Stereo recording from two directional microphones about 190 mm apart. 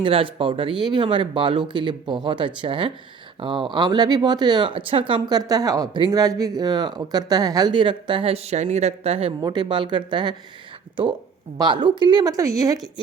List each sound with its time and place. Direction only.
0.0 s speech: 30° right (ahead or behind)
11.5 s speech: 25° right (ahead or behind)